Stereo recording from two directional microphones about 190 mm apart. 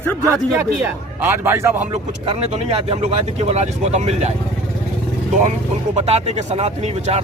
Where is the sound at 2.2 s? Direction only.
35° right (ahead or behind).